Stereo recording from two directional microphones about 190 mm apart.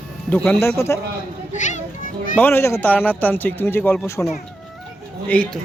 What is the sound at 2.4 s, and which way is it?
Speech, 10° left (ahead or behind).